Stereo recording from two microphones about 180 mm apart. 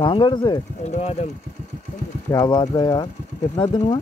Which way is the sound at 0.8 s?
40° left (ahead or behind).